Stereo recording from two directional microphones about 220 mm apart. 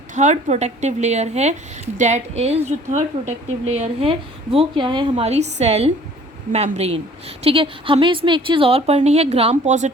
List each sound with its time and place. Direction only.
0.1 s a woman's voice: 35° right (ahead or behind)